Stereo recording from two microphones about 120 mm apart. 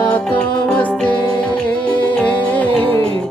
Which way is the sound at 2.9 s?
50° right (ahead or behind).